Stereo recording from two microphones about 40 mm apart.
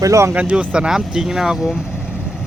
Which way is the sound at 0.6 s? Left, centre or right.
Right.